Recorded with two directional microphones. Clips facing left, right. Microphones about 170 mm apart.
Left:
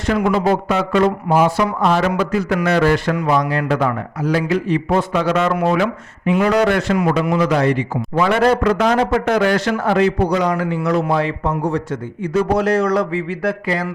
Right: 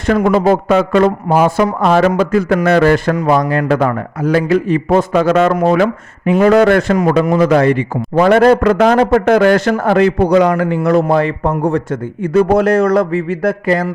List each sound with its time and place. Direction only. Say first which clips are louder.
0.0 s speech: right 5 dB; 50° right (ahead or behind)